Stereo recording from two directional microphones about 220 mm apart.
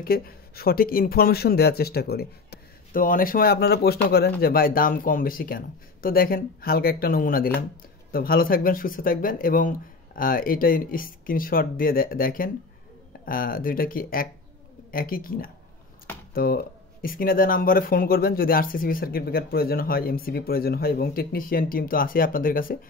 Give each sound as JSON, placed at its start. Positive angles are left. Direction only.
{"t": 0.0, "sound": "speech", "side_deg": 40}